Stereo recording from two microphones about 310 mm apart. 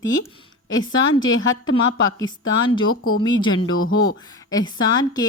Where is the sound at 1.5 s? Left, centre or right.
Left.